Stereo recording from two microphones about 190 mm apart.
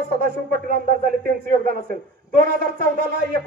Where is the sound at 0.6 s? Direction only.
50° right (ahead or behind).